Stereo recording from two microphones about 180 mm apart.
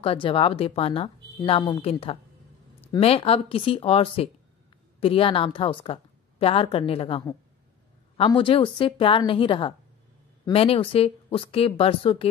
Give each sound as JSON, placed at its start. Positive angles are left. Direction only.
{"t": 0.0, "sound": "a woman's voice", "side_deg": 30}